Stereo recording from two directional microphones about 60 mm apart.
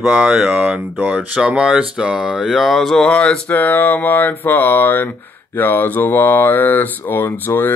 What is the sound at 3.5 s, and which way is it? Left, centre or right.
Speech, left.